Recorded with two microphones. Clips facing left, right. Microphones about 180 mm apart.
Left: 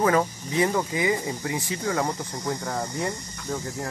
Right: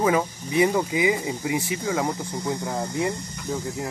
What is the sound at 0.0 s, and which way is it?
Speech, 10° right (ahead or behind).